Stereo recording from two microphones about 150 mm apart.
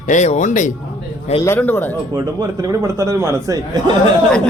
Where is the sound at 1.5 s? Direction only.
15° left (ahead or behind).